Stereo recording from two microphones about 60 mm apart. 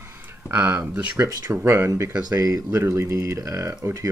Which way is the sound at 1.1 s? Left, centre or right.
Right.